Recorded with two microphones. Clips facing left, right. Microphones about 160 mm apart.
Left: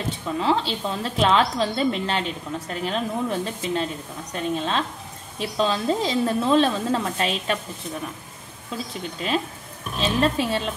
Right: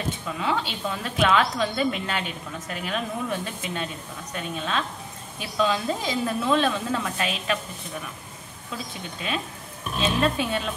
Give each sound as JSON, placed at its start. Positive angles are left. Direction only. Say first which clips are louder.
{"t": 0.4, "sound": "a woman's voice", "louder": "left 5 dB", "side_deg": 30}
{"t": 9.9, "sound": "a woman's voice", "louder": "left 2 dB", "side_deg": 30}